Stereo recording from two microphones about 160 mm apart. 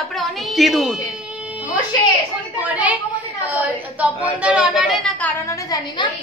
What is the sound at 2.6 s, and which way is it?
Speech, 10° right (ahead or behind).